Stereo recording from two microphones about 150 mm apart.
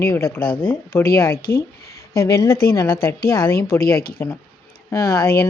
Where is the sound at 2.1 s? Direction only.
90° left.